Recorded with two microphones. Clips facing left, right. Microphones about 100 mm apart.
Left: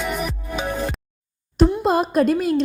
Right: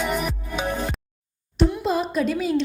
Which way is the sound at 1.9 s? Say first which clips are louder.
Left 5 dB; 50° left (ahead or behind).